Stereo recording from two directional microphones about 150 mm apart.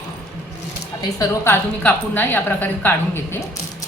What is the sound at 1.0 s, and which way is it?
A woman's voice, 20° left (ahead or behind).